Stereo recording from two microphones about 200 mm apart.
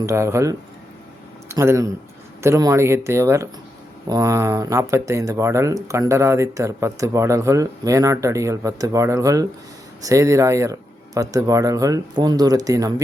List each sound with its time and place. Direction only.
0.0 s speech: 15° right (ahead or behind)